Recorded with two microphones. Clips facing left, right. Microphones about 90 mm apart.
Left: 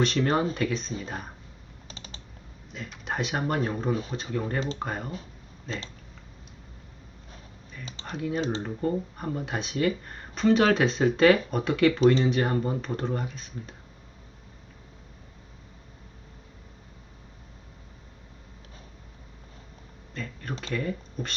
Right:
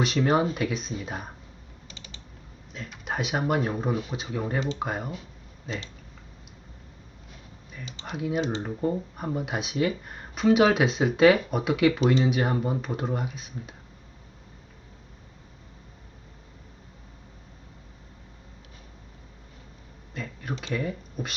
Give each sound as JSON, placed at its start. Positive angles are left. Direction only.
{"t": 0.0, "sound": "speech", "side_deg": -10}
{"t": 1.9, "sound": "typing", "side_deg": 40}
{"t": 2.7, "sound": "speech", "side_deg": 0}
{"t": 8.0, "sound": "speech", "side_deg": -10}
{"t": 20.1, "sound": "speech", "side_deg": -5}